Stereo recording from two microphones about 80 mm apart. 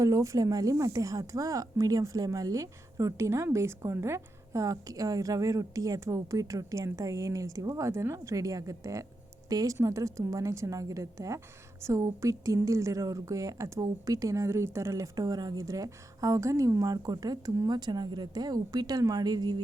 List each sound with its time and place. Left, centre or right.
0.0 s a woman's voice: right